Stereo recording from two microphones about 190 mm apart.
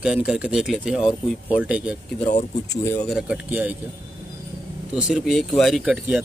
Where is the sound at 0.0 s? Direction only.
5° right (ahead or behind).